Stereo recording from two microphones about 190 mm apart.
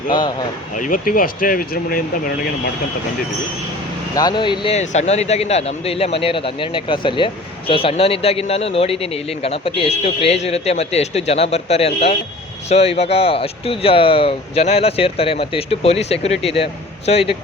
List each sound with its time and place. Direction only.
0.1 s speech: 20° left (ahead or behind)
0.8 s speech: 45° left (ahead or behind)
4.1 s speech: 20° left (ahead or behind)